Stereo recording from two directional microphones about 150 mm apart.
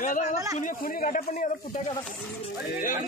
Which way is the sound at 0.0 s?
60° left (ahead or behind).